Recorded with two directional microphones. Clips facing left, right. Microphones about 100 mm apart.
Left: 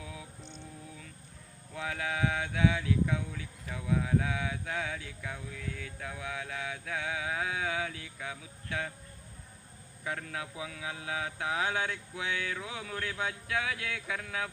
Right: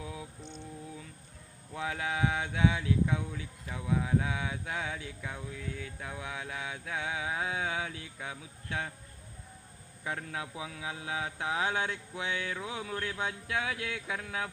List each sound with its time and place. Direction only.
0.0 s mantra: 25° right (ahead or behind)
1.7 s speech: 25° right (ahead or behind)
10.0 s speech: 20° right (ahead or behind)